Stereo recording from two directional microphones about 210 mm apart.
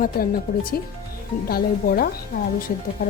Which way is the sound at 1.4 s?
45° left (ahead or behind).